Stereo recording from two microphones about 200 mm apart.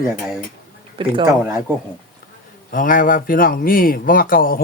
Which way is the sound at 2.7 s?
40° left (ahead or behind).